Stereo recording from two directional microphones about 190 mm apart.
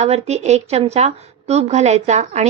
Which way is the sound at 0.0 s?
35° right (ahead or behind).